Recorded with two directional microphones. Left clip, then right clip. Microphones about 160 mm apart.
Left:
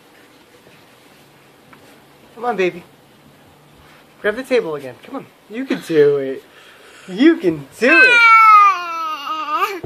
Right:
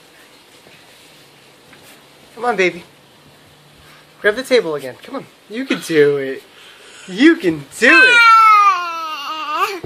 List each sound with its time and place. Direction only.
2.3 s speech: 15° right (ahead or behind)
4.2 s speech: 20° right (ahead or behind)
5.7 s speech: centre (ahead or behind)
6.9 s cat: centre (ahead or behind)